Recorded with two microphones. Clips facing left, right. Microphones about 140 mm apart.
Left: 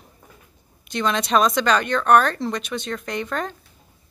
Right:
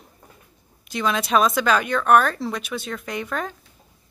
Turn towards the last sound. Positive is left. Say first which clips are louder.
# left 1 dB
turn(degrees=-5)  # may be behind; listen again after turning